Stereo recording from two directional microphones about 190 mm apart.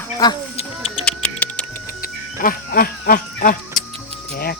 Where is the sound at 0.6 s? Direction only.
30° left (ahead or behind).